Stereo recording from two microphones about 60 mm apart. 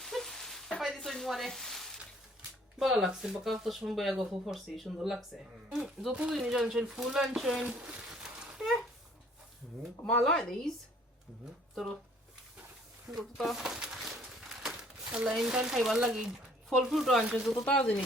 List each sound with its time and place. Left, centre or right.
0.0 s sizzle: centre
0.8 s speech: centre
7.6 s speech: centre
8.5 s a sound: centre
11.7 s speech: centre
13.1 s speech: centre
13.7 s a sound: centre
14.5 s crumpling: centre
15.1 s speech: centre
17.7 s speech: left